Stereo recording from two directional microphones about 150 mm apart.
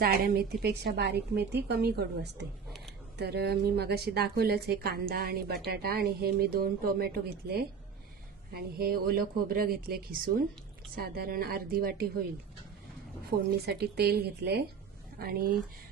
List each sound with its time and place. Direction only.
0.0 s a woman's voice: 85° right
10.9 s speech: 90° right
13.3 s a woman's voice: 50° right (ahead or behind)
13.7 s a woman's voice: 90° right